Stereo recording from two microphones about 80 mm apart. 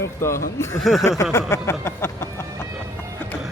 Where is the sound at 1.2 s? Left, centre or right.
Left.